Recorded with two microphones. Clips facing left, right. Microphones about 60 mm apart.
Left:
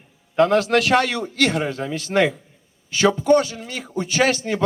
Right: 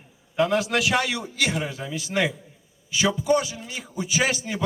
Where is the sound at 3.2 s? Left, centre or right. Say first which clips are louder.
Left 5 dB; centre.